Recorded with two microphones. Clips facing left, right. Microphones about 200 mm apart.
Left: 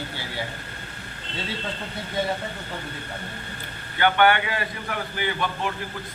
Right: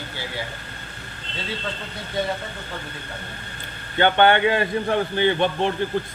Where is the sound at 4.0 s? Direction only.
25° right (ahead or behind).